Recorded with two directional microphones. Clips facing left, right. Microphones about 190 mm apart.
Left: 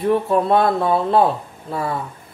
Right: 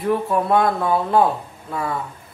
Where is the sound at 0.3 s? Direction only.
30° left (ahead or behind).